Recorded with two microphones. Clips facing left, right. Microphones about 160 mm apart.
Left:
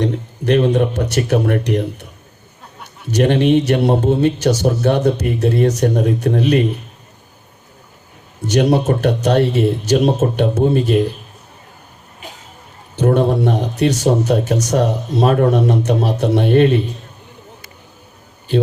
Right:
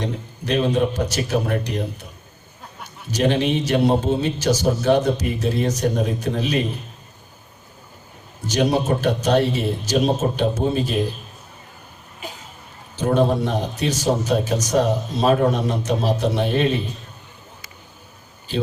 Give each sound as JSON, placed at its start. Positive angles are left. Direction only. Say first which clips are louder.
{"t": 0.0, "sound": "a man's voice", "louder": "left 8 dB", "side_deg": 65}
{"t": 3.1, "sound": "a man's voice", "louder": "left 6 dB", "side_deg": 65}
{"t": 8.4, "sound": "a man's voice", "louder": "left 5 dB", "side_deg": 65}
{"t": 13.0, "sound": "a man's voice", "louder": "left 4 dB", "side_deg": 60}